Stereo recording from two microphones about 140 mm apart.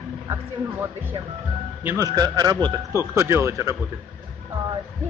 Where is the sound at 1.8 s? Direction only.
25° right (ahead or behind).